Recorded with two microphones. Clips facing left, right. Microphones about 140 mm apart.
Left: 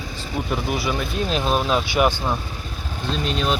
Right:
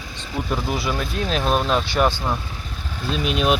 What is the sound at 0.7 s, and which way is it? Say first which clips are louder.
Speech: even; centre (ahead or behind).